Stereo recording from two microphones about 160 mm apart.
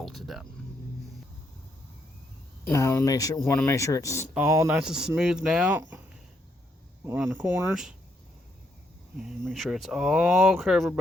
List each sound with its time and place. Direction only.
0.0 s speech: centre (ahead or behind)
2.6 s speech: 15° left (ahead or behind)
4.4 s speech: 20° right (ahead or behind)
4.8 s speech: 5° right (ahead or behind)
7.0 s speech: 15° right (ahead or behind)
9.5 s speech: centre (ahead or behind)